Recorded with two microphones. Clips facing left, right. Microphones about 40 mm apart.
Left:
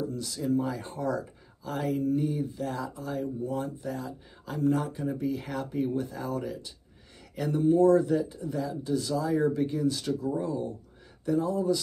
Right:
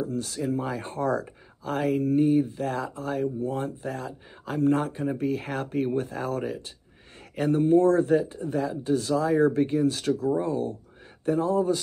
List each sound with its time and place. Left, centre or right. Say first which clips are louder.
0.0 s speech: right 3 dB; right